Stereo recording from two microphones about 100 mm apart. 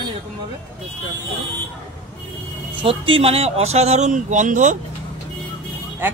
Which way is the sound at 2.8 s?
65° right (ahead or behind).